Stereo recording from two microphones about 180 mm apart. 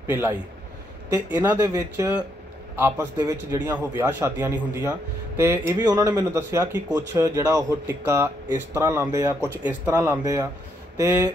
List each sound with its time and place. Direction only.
0.0 s speech: 10° right (ahead or behind)
10.2 s speech: 20° right (ahead or behind)